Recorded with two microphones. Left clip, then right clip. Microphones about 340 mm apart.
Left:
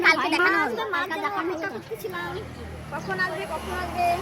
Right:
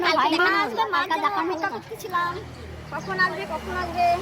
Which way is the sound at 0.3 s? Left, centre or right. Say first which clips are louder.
Right 1 dB; centre.